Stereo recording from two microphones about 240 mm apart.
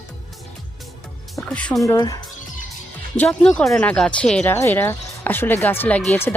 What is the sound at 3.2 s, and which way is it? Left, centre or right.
Speech, centre.